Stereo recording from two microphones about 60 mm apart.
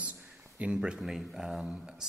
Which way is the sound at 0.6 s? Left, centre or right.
Centre.